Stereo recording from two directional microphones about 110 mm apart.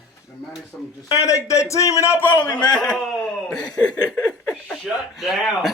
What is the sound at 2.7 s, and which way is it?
Speech, 5° left (ahead or behind).